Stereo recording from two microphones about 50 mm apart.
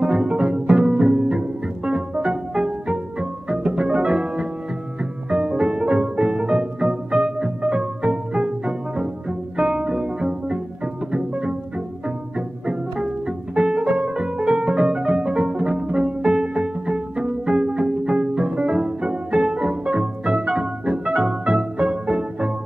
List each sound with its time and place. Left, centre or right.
0.0 s music: centre
11.1 s pizzicato: centre
12.4 s music: centre